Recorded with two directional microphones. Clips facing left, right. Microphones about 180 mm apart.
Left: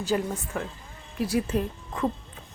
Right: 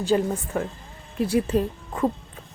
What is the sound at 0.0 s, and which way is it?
A woman's voice, 30° right (ahead or behind).